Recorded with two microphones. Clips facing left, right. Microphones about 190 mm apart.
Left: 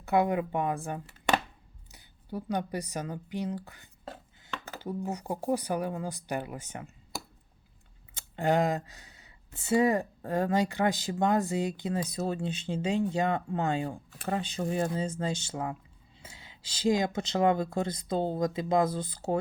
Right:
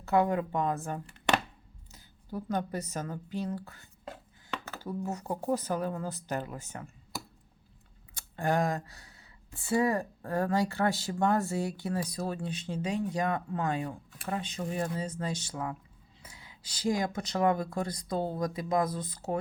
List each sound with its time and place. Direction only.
0.0 s speech: 15° left (ahead or behind)
4.0 s chopping: 30° left (ahead or behind)
4.7 s speech: 15° left (ahead or behind)
8.1 s speech: 20° left (ahead or behind)